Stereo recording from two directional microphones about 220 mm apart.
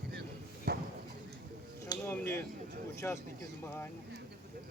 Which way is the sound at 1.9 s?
10° left (ahead or behind).